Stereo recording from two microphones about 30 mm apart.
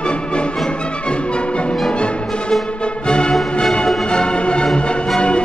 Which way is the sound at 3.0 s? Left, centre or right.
Left.